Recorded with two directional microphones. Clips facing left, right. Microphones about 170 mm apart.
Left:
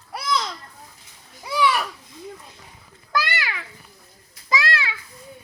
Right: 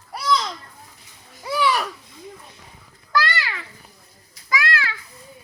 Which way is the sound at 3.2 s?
15° left (ahead or behind).